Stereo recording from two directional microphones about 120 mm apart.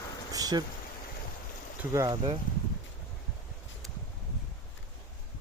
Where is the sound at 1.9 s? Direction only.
35° right (ahead or behind).